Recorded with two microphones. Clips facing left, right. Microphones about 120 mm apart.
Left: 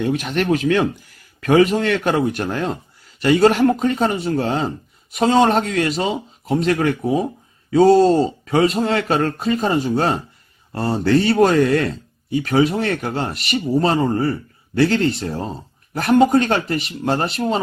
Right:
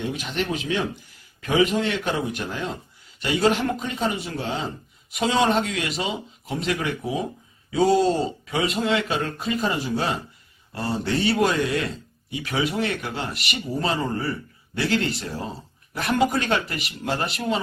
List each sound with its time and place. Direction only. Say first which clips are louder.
0.0 s speech: left 7 dB; 50° left (ahead or behind)
8.6 s speech: left 2 dB; 35° left (ahead or behind); by 9.6 s 55° left (ahead or behind)
9.6 s speech: left 5 dB; 40° left (ahead or behind)
9.9 s speech: left 6 dB; 50° left (ahead or behind)
12.3 s speech: left 9 dB; 40° left (ahead or behind)